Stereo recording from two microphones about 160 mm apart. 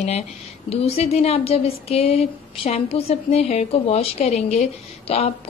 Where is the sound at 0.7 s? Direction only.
40° left (ahead or behind).